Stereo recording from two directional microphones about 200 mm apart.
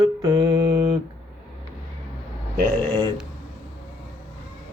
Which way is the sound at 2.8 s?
10° left (ahead or behind).